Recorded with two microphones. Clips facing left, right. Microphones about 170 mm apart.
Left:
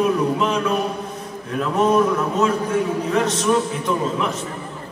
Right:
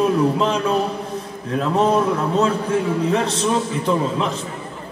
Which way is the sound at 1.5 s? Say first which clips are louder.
Even; 30° right (ahead or behind).